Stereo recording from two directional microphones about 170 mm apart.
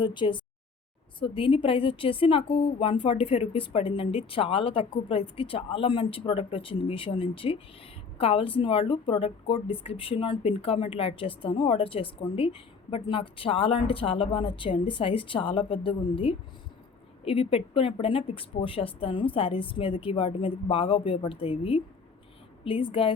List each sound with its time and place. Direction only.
0.0 s a woman's voice: 30° left (ahead or behind)